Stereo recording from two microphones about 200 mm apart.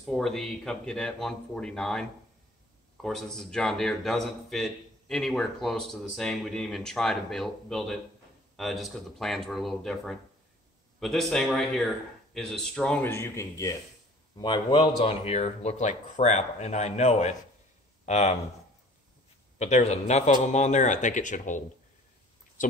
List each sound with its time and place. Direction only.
0.0 s speech: centre (ahead or behind); by 18.4 s 35° left (ahead or behind)
19.6 s speech: 35° left (ahead or behind)